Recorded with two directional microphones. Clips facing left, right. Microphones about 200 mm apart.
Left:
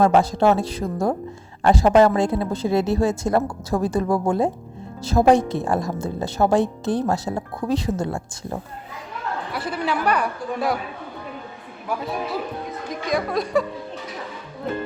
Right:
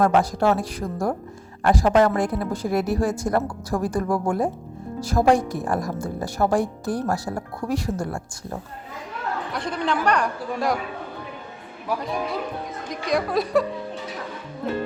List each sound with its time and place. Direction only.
0.0 s a woman's voice: 25° left (ahead or behind)
9.5 s speech: 5° left (ahead or behind)
12.9 s speech: centre (ahead or behind)